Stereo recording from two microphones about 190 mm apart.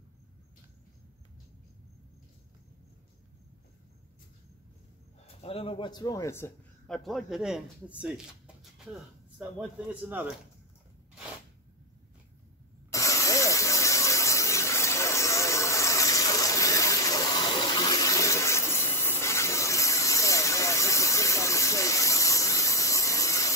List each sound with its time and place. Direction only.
5.4 s a man's voice: 30° left (ahead or behind); by 6.5 s 15° left (ahead or behind)
6.9 s speech: centre (ahead or behind)
12.9 s a sound: 15° left (ahead or behind)